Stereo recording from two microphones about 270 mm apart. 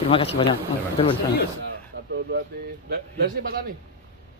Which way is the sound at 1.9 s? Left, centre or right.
Right.